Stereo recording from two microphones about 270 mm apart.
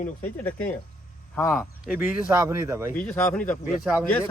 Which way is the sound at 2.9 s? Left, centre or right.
Centre.